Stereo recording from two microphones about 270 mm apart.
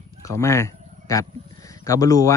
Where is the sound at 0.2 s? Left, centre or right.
Centre.